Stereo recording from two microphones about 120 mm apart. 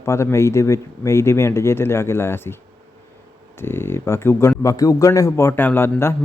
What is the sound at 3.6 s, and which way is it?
Speech, 20° left (ahead or behind).